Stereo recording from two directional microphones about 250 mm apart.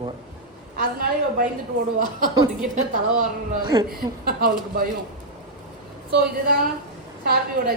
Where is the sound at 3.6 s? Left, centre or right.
Centre.